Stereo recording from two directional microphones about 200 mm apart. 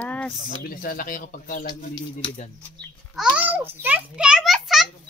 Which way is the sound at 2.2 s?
25° left (ahead or behind).